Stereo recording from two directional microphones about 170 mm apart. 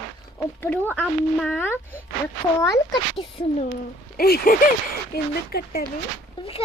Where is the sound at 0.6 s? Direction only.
10° left (ahead or behind).